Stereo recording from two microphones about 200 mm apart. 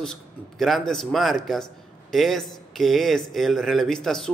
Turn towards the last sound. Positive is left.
turn(degrees=0)  # may be behind; listen again after turning